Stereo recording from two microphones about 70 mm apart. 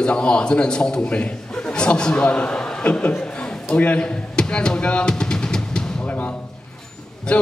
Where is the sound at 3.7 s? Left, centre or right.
Centre.